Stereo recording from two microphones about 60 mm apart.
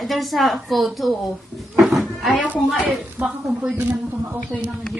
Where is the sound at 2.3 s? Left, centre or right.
Right.